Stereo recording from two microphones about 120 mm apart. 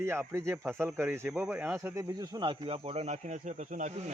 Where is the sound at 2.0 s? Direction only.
30° right (ahead or behind).